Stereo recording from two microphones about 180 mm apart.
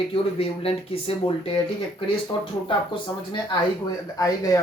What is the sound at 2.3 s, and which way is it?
Speech, 25° left (ahead or behind).